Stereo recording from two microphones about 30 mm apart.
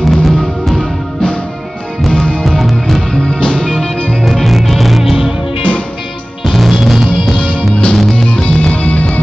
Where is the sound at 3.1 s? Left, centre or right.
Left.